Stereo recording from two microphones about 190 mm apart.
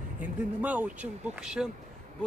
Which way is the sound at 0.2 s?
10° right (ahead or behind).